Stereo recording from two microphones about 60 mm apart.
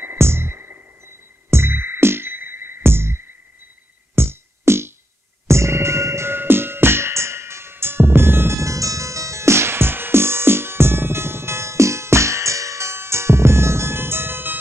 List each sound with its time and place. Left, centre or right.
0.2 s music: right
8.5 s music: right